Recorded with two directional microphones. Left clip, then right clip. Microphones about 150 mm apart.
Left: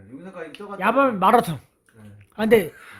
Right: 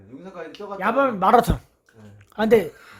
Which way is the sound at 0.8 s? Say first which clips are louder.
Left 1 dB; 15° left (ahead or behind).